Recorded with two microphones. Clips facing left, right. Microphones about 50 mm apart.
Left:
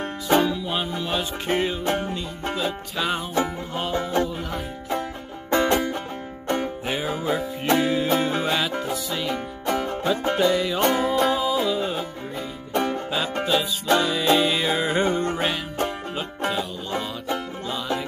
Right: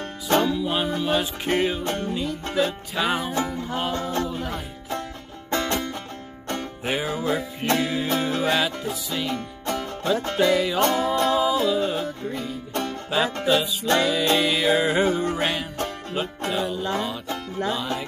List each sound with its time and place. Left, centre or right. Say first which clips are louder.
0.3 s music: left 1 dB; centre
0.6 s music: right 3 dB; centre
1.9 s music: left 2 dB; centre
2.5 s music: right 3 dB; centre
3.3 s music: left 1 dB; centre
4.3 s music: even; centre
7.1 s music: even; centre
13.8 s music: left 1 dB; centre